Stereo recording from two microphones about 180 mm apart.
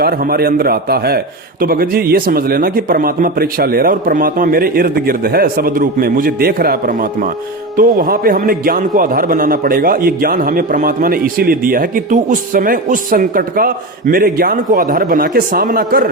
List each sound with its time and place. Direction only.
0.0 s a man's voice: 55° right (ahead or behind)